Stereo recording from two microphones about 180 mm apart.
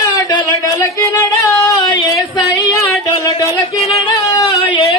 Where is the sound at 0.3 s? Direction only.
25° left (ahead or behind).